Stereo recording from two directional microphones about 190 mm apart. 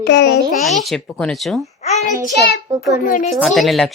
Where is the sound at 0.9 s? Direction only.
5° left (ahead or behind).